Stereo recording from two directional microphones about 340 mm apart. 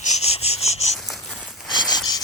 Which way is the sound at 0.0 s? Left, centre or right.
Centre.